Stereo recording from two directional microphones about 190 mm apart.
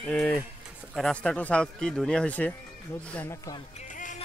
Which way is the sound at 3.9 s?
45° left (ahead or behind).